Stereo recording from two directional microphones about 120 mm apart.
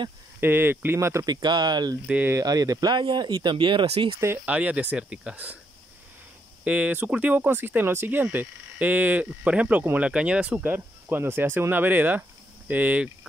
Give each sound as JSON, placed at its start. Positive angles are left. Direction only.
{"t": 0.4, "sound": "speech", "side_deg": -20}
{"t": 1.3, "sound": "speech", "side_deg": -35}
{"t": 2.0, "sound": "speech", "side_deg": -10}
{"t": 2.3, "sound": "speech", "side_deg": -30}
{"t": 4.5, "sound": "speech", "side_deg": -10}
{"t": 6.6, "sound": "speech", "side_deg": -10}